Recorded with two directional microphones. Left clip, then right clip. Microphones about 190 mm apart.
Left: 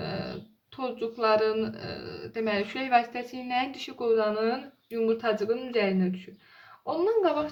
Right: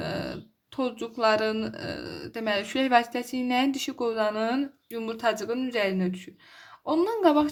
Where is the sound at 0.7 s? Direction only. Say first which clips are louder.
Right 2 dB; 45° right (ahead or behind).